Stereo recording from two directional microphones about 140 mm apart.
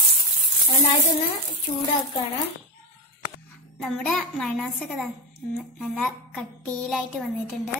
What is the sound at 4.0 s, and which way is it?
A child's voice, 5° left (ahead or behind).